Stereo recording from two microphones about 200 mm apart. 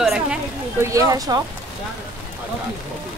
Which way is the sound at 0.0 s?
Centre (ahead or behind).